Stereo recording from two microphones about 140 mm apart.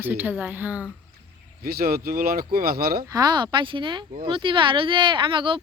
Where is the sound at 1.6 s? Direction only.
90° right.